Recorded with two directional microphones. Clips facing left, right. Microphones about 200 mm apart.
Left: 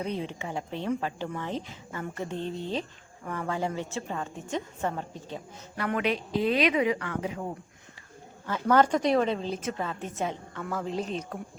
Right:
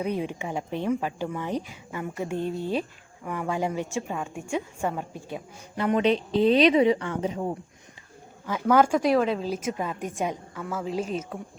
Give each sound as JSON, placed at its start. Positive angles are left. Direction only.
{"t": 0.0, "sound": "speech", "side_deg": -15}
{"t": 5.7, "sound": "speech", "side_deg": -25}
{"t": 8.4, "sound": "speech", "side_deg": -10}